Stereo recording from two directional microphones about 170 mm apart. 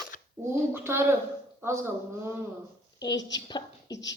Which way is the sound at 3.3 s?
25° left (ahead or behind).